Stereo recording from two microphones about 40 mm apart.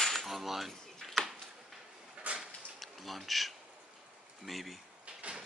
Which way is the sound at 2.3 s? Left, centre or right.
Right.